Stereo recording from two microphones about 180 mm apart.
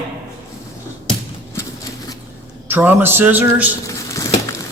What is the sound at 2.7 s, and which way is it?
Speech, 10° right (ahead or behind).